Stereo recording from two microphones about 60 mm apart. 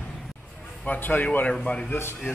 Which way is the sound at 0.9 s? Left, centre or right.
Left.